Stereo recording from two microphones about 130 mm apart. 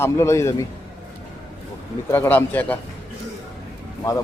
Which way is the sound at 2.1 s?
15° left (ahead or behind).